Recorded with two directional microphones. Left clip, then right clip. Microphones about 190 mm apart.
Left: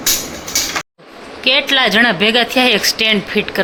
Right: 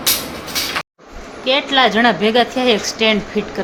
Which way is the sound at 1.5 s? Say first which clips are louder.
Left 2 dB; 10° left (ahead or behind).